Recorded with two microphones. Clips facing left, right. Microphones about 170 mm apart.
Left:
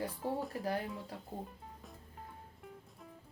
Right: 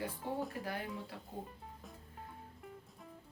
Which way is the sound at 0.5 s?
35° left (ahead or behind).